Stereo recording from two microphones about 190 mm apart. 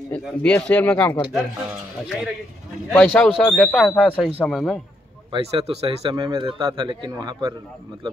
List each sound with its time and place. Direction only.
0.1 s speech: 5° left (ahead or behind)
2.9 s speech: 5° left (ahead or behind)
5.3 s a man's voice: 30° right (ahead or behind)